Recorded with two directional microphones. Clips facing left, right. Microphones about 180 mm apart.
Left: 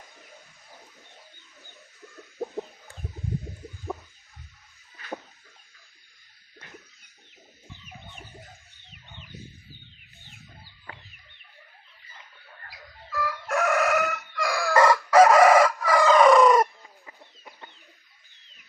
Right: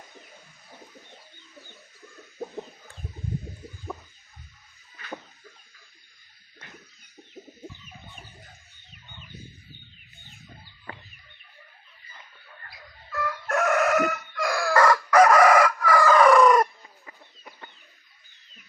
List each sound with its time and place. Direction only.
3.9 s a sound: 5° left (ahead or behind)
10.9 s chicken: centre (ahead or behind)
13.1 s chicken: centre (ahead or behind)
14.7 s chicken: 25° left (ahead or behind)